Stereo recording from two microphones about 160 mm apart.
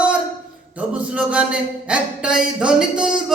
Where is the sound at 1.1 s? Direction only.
5° right (ahead or behind).